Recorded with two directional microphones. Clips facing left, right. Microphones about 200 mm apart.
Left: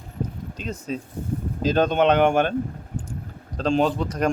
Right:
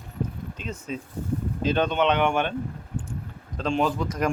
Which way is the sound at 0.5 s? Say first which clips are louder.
Left 5 dB; 40° left (ahead or behind).